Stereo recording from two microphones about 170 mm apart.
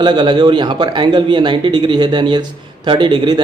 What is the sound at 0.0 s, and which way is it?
A man's voice, 25° right (ahead or behind).